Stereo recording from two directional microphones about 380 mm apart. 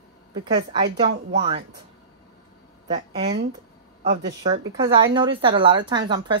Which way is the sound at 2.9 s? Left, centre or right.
Centre.